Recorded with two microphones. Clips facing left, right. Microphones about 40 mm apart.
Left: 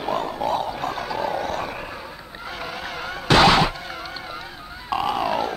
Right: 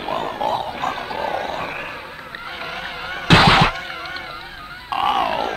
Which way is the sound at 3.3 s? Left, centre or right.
Right.